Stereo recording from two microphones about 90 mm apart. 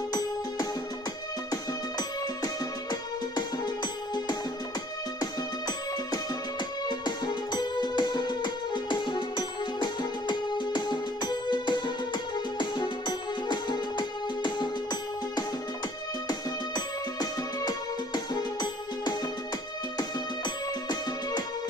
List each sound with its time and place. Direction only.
0.1 s music: 45° left (ahead or behind)